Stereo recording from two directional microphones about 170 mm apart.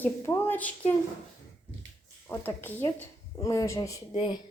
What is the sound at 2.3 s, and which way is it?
A woman's voice, 10° left (ahead or behind).